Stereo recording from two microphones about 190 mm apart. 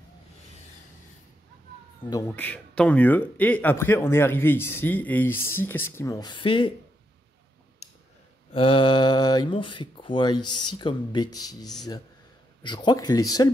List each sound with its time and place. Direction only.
2.3 s a man's voice: 10° left (ahead or behind); by 6.7 s 25° left (ahead or behind)
8.5 s speech: 25° left (ahead or behind)